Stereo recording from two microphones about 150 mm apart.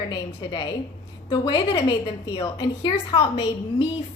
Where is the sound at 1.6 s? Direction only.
45° left (ahead or behind).